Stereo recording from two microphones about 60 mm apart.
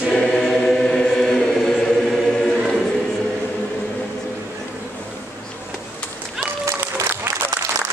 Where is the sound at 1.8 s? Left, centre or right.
Centre.